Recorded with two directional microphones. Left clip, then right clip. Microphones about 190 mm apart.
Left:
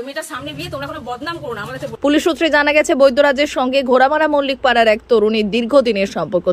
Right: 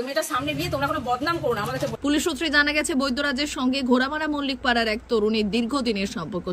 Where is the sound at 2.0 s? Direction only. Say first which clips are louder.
Left 13 dB; 15° left (ahead or behind).